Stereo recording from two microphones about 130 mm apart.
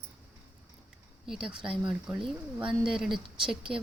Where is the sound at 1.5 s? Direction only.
40° right (ahead or behind).